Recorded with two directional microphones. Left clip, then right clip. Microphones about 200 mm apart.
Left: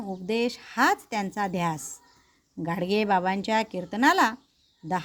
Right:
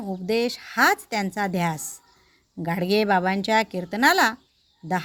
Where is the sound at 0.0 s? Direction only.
15° right (ahead or behind).